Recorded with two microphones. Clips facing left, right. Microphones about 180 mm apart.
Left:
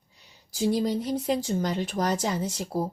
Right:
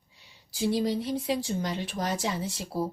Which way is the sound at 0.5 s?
45° left (ahead or behind).